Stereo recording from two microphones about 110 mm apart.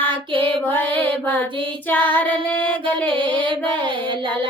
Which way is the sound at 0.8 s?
15° left (ahead or behind).